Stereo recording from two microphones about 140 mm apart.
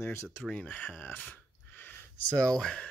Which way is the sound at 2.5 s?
5° left (ahead or behind).